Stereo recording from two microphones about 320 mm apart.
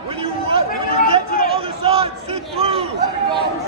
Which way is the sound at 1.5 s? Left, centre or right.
Centre.